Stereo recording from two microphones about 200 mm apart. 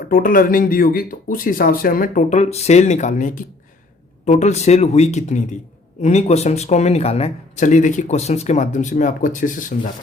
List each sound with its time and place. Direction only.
0.1 s speech: 45° left (ahead or behind)